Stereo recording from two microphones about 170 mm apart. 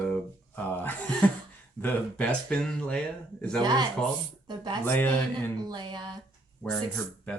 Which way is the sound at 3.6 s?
25° right (ahead or behind).